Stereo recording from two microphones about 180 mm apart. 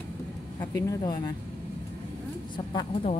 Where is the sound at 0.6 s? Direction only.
20° left (ahead or behind).